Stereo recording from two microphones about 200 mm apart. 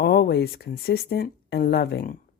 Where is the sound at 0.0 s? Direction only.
55° left (ahead or behind).